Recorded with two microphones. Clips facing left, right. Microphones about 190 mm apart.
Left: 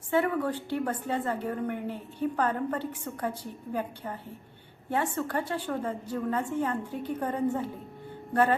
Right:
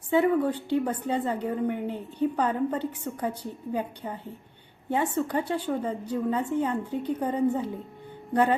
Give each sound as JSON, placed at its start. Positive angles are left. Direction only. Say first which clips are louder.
{"t": 0.1, "sound": "a woman's voice", "louder": "right 4 dB", "side_deg": -15}